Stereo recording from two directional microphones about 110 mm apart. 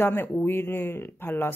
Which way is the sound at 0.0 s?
20° left (ahead or behind).